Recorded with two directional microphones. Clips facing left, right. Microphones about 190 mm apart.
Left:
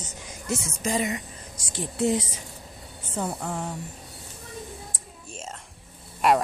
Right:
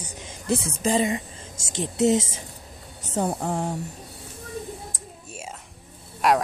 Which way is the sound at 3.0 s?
35° right (ahead or behind).